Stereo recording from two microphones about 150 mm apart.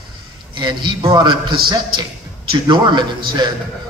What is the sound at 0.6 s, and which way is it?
A man's voice, 30° right (ahead or behind).